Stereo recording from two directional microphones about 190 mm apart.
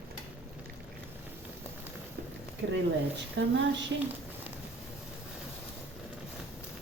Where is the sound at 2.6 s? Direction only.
65° right (ahead or behind).